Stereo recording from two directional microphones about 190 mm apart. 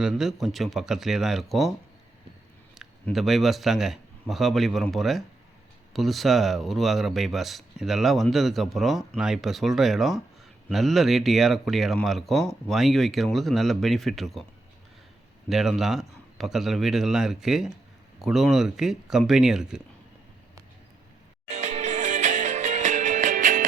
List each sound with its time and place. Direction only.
0.0 s speech: centre (ahead or behind)
2.7 s a man's voice: centre (ahead or behind)
15.4 s speech: centre (ahead or behind)
21.5 s music: 35° right (ahead or behind)